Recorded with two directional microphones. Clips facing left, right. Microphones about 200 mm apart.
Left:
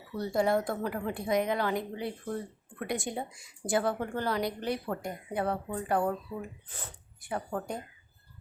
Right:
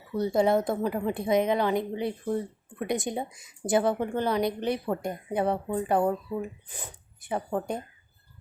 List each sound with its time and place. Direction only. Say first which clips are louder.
0.1 s a woman's voice: right 4 dB; 20° right (ahead or behind)